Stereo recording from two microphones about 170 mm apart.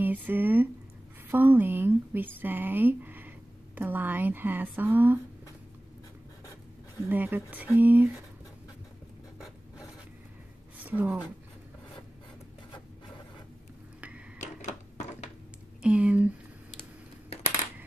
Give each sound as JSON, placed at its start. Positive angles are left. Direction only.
{"t": 0.0, "sound": "speech", "side_deg": -10}
{"t": 7.1, "sound": "speech", "side_deg": -10}
{"t": 10.8, "sound": "a woman's voice", "side_deg": -10}
{"t": 14.4, "sound": "a sound", "side_deg": 45}
{"t": 15.8, "sound": "speech", "side_deg": -5}